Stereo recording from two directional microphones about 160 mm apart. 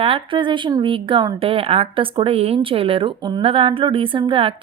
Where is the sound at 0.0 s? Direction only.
35° right (ahead or behind).